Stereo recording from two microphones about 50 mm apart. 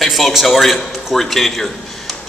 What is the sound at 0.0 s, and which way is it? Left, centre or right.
A man's voice, centre.